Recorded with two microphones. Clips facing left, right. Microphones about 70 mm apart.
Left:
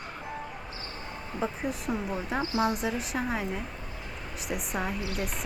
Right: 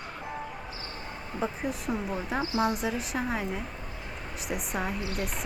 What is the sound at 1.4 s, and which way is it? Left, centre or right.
Speech, centre.